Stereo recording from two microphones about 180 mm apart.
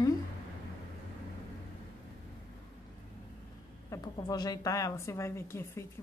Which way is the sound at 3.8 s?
20° left (ahead or behind).